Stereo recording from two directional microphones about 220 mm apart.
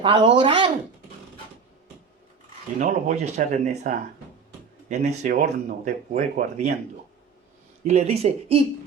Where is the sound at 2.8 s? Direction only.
35° right (ahead or behind).